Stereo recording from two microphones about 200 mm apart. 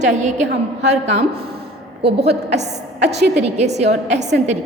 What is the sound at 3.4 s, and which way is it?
A woman's voice, 35° right (ahead or behind).